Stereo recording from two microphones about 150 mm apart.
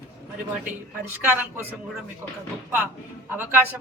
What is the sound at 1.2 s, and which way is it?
Speech, 15° right (ahead or behind).